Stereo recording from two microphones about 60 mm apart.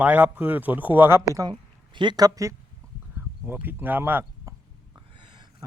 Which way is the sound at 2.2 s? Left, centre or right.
Right.